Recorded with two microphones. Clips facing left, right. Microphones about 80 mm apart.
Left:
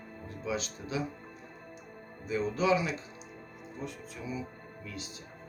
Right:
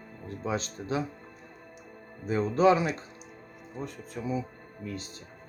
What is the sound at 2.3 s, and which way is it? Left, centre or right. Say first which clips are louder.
Speech: right 5 dB; right.